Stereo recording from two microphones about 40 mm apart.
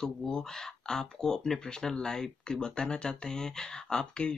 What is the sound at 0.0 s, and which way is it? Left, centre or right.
Speech, centre.